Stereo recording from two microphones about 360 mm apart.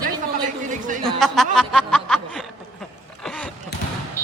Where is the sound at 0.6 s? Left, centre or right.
Right.